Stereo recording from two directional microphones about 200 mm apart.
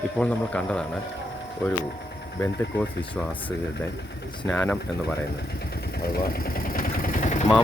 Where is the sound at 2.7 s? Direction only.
60° left (ahead or behind).